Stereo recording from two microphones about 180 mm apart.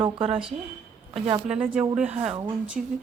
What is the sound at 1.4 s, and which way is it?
Speech, 5° right (ahead or behind).